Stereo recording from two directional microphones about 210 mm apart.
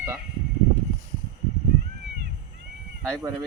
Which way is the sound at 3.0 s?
10° right (ahead or behind).